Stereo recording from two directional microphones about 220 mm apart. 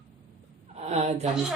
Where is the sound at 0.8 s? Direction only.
30° right (ahead or behind).